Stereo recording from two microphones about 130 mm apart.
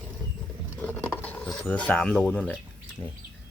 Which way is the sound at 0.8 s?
10° left (ahead or behind).